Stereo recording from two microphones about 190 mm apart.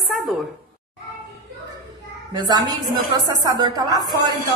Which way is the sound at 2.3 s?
20° right (ahead or behind).